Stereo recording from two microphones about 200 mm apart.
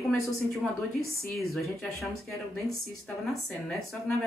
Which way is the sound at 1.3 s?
Centre (ahead or behind).